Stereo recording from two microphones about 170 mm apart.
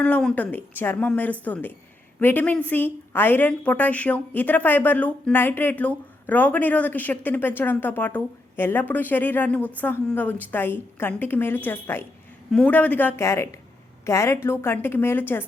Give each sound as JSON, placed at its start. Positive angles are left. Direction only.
{"t": 0.0, "sound": "a woman's voice", "side_deg": 5}